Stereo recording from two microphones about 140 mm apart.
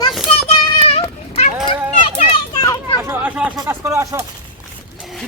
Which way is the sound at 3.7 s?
20° right (ahead or behind).